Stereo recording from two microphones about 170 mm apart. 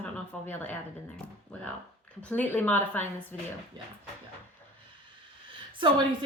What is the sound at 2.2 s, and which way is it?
Speech, 10° left (ahead or behind).